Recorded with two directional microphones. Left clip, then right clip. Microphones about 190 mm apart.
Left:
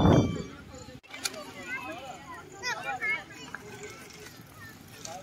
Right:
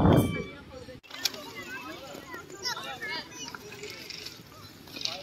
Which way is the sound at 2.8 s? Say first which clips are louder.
Left 5 dB; 30° left (ahead or behind).